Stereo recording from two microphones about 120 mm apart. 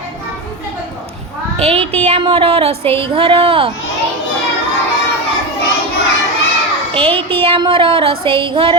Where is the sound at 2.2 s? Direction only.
50° right (ahead or behind).